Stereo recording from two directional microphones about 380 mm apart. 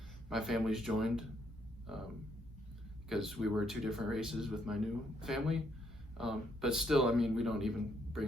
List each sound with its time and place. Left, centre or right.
0.3 s speech: centre
3.1 s speech: centre